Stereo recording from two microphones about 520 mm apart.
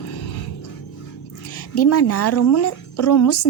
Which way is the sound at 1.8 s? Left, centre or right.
Left.